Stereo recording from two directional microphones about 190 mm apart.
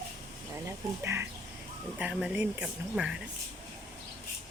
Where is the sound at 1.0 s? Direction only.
10° right (ahead or behind).